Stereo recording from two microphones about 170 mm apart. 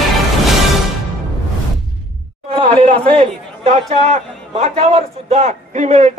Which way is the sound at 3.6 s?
40° right (ahead or behind).